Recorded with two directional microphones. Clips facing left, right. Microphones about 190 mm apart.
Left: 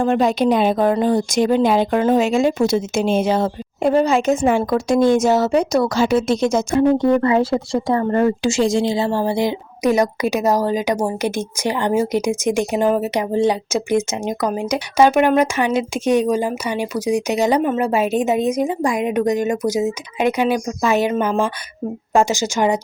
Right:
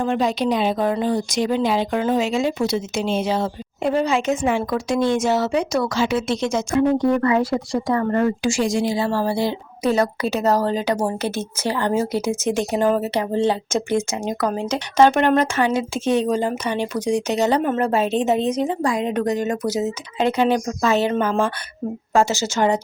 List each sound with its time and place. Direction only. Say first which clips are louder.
0.0 s speech: left 4 dB; 50° left (ahead or behind)
7.0 s a woman's voice: left 3 dB; 25° left (ahead or behind)